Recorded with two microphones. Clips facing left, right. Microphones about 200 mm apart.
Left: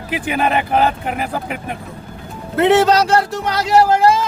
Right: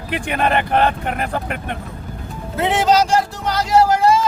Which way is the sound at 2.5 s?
60° left (ahead or behind).